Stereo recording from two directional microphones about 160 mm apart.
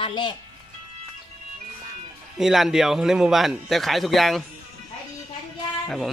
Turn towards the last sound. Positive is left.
turn(degrees=0)  # may be behind; listen again after turning